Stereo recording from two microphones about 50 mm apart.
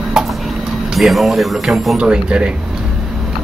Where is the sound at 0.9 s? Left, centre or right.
Centre.